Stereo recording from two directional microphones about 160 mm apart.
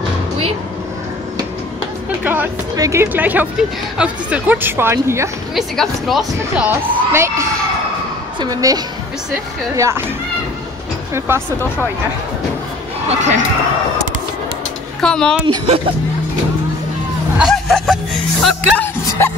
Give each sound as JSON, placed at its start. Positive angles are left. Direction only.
{"t": 2.2, "sound": "a sound", "side_deg": -10}
{"t": 2.7, "sound": "speech", "side_deg": -20}
{"t": 5.5, "sound": "speech", "side_deg": 0}
{"t": 6.7, "sound": "a woman's voice", "side_deg": -15}
{"t": 11.1, "sound": "speech", "side_deg": -15}
{"t": 13.1, "sound": "speech", "side_deg": -45}
{"t": 15.0, "sound": "speech", "side_deg": 5}
{"t": 15.4, "sound": "speech", "side_deg": -35}
{"t": 17.4, "sound": "speech", "side_deg": 0}